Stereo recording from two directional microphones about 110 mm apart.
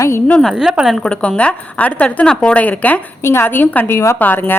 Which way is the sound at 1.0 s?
10° left (ahead or behind).